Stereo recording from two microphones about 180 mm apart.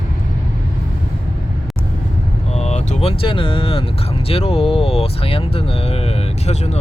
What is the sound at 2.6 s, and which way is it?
Speech, 40° left (ahead or behind).